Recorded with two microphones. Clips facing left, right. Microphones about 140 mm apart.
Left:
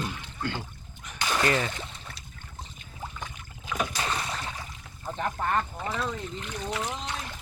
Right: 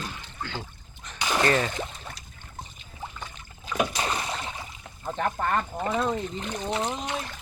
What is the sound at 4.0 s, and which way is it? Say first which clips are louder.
Rowboat: right 2 dB; 35° right (ahead or behind).